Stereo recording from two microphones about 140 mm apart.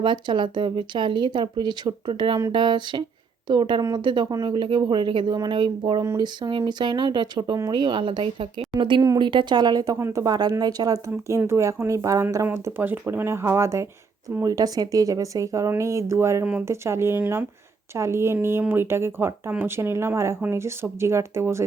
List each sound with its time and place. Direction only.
0.0 s a woman's voice: 35° right (ahead or behind); by 21.6 s 20° right (ahead or behind)